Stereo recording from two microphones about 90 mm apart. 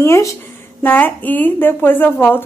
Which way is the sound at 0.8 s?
20° left (ahead or behind).